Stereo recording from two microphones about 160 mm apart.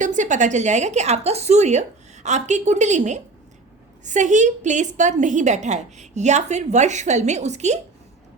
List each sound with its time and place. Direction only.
0.0 s a woman's voice: 50° right (ahead or behind)